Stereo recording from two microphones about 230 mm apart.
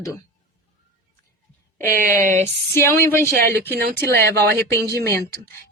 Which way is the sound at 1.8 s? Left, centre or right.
Centre.